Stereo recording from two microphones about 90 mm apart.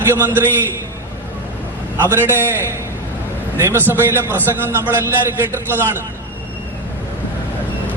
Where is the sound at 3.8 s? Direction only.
25° right (ahead or behind).